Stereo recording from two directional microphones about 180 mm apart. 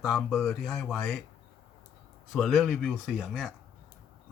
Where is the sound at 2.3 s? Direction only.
Centre (ahead or behind).